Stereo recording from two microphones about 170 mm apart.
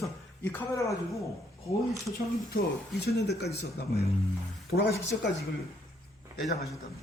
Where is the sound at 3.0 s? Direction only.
75° left (ahead or behind).